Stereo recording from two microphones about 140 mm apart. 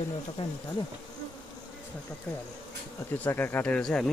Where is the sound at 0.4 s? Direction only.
40° left (ahead or behind).